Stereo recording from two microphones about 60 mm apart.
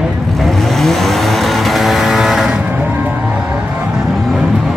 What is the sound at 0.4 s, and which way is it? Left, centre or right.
Vehicle, centre.